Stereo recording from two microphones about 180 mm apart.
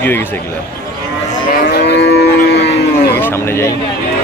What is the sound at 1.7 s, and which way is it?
Moo, 65° left (ahead or behind).